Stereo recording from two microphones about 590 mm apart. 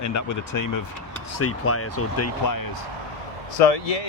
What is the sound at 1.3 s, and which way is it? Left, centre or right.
Speech, left.